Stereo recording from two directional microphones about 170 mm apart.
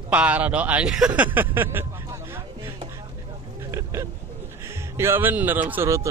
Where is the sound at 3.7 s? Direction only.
15° right (ahead or behind).